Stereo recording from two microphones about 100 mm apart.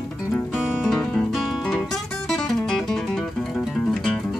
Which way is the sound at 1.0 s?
5° left (ahead or behind).